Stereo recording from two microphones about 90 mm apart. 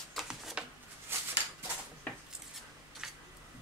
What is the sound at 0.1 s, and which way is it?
Shuffling cards, 5° right (ahead or behind).